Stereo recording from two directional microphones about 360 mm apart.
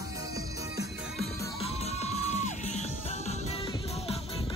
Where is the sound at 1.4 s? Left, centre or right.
Centre.